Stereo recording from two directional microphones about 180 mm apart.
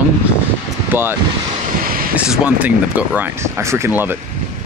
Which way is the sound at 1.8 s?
55° right (ahead or behind).